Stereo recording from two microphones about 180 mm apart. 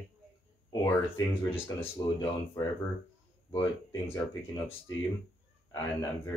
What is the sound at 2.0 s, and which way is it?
Speech, 20° left (ahead or behind).